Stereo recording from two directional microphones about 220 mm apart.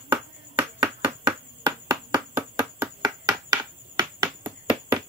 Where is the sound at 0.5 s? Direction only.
10° right (ahead or behind).